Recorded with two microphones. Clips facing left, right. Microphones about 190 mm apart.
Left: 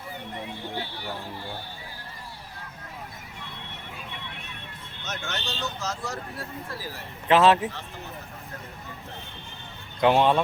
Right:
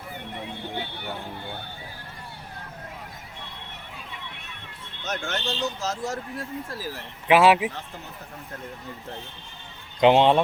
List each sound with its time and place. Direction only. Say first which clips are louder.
0.6 s a sound: right 1 dB; 20° right (ahead or behind)
5.0 s speech: right 5 dB; 50° right (ahead or behind)
7.3 s speech: right 1 dB; 10° right (ahead or behind)
10.0 s speech: right 3 dB; 20° right (ahead or behind)